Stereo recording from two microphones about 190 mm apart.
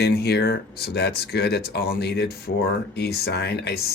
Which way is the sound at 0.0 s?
55° left (ahead or behind).